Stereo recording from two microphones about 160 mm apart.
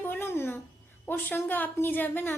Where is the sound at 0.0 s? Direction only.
15° left (ahead or behind).